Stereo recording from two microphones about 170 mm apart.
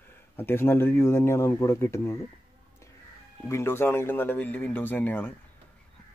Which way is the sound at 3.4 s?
15° left (ahead or behind).